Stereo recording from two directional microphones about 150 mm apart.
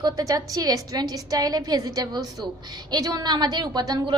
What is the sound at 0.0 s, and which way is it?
A woman's voice, 25° right (ahead or behind).